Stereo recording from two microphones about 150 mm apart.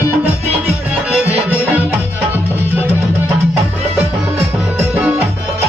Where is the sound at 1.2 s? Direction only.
10° right (ahead or behind).